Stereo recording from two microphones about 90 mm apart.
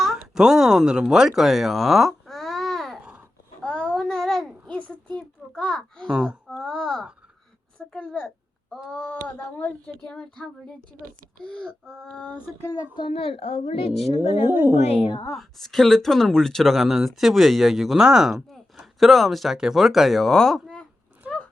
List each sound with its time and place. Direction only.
0.2 s speech: 5° right (ahead or behind)
1.4 s babbling: centre (ahead or behind)
3.6 s a sound: 10° left (ahead or behind)
6.1 s speech: 5° right (ahead or behind)
6.6 s a sound: 5° left (ahead or behind)
7.9 s speech: 10° left (ahead or behind)
12.9 s a woman's voice: 75° left (ahead or behind)
14.2 s speech: 25° right (ahead or behind)
14.9 s a woman's voice: 75° left (ahead or behind)
15.3 s speech: 5° left (ahead or behind)
21.2 s a sound: 10° right (ahead or behind)